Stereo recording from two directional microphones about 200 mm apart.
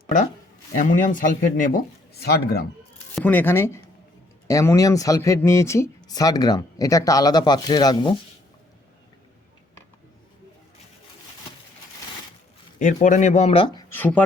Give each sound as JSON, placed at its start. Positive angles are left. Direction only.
{"t": 0.8, "sound": "speech", "side_deg": 40}
{"t": 2.2, "sound": "a man's voice", "side_deg": 50}
{"t": 3.2, "sound": "speech", "side_deg": 10}
{"t": 12.8, "sound": "speech", "side_deg": 40}
{"t": 13.9, "sound": "speech", "side_deg": 10}